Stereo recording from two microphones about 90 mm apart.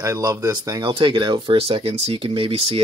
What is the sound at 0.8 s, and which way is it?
Speech, 60° right (ahead or behind).